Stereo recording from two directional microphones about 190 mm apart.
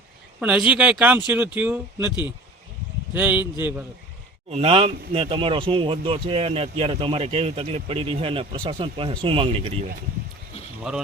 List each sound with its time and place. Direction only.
0.3 s speech: 5° right (ahead or behind)
4.5 s speech: 35° right (ahead or behind)
10.9 s speech: centre (ahead or behind)